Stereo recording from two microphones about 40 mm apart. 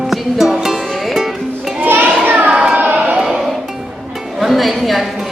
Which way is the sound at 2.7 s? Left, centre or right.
Right.